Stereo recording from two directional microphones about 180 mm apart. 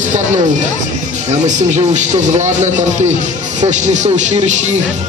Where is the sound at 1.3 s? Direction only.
40° right (ahead or behind).